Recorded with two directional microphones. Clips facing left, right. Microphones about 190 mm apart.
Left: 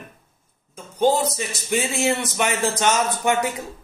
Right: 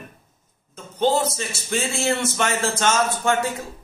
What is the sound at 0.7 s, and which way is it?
Speech, 10° left (ahead or behind).